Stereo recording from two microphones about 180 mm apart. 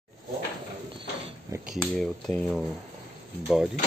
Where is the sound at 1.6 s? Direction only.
Centre (ahead or behind).